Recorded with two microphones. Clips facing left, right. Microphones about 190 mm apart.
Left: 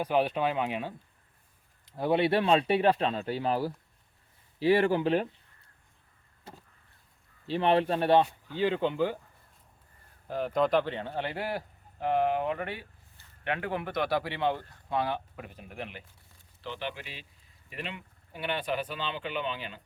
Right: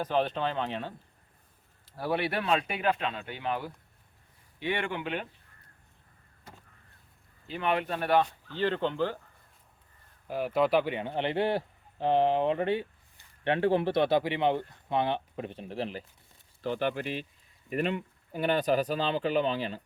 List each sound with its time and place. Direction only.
0.0 s speech: 10° left (ahead or behind)
1.8 s speech: 20° left (ahead or behind)
7.4 s speech: 30° left (ahead or behind)
8.3 s speech: 10° left (ahead or behind)
10.2 s speech: 5° right (ahead or behind); by 16.0 s 35° right (ahead or behind)
16.6 s speech: 45° right (ahead or behind)